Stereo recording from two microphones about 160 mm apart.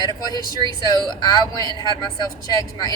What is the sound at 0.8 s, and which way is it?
Speech, 25° left (ahead or behind).